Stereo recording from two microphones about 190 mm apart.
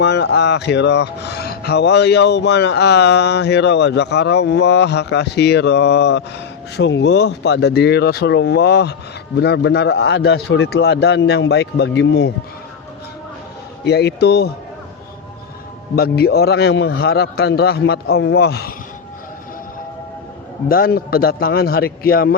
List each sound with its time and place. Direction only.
0.0 s speech: 65° left (ahead or behind)
13.8 s speech: 60° left (ahead or behind)
16.0 s speech: 55° left (ahead or behind)
20.7 s a man's voice: 50° left (ahead or behind)